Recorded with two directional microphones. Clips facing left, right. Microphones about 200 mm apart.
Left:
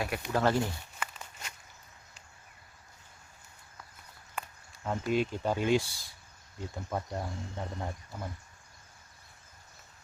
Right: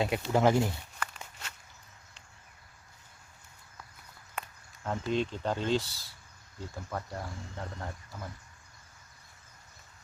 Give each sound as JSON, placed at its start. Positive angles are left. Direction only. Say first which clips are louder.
{"t": 0.3, "sound": "speech", "louder": "right 2 dB", "side_deg": -15}
{"t": 0.9, "sound": "a sound", "louder": "even", "side_deg": 5}
{"t": 4.4, "sound": "speech", "louder": "even", "side_deg": 0}